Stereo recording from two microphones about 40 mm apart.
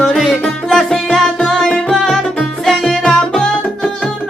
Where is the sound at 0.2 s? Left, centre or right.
Centre.